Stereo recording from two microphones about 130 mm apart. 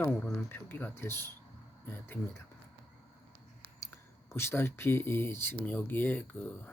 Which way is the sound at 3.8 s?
20° left (ahead or behind).